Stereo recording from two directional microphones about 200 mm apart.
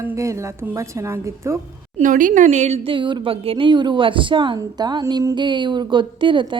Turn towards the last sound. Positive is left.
turn(degrees=-25)  # may be behind; listen again after turning